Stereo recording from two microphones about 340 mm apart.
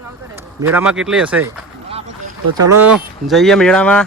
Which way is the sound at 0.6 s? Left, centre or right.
Centre.